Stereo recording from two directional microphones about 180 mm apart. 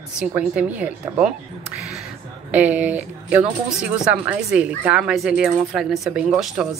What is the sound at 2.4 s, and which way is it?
Speech, 10° right (ahead or behind).